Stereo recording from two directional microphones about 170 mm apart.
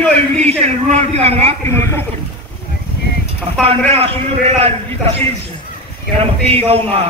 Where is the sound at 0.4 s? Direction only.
40° right (ahead or behind).